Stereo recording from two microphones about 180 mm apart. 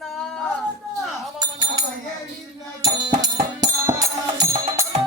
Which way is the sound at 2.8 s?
20° right (ahead or behind).